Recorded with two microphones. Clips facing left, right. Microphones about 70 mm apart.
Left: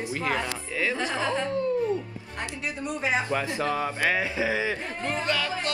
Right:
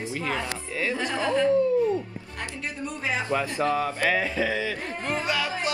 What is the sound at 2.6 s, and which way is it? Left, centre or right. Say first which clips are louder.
Speech: left 2 dB; centre.